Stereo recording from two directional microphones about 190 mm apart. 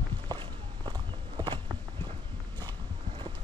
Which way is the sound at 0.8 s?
20° right (ahead or behind).